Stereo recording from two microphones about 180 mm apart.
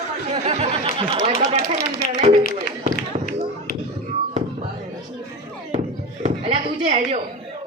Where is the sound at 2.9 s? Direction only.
50° left (ahead or behind).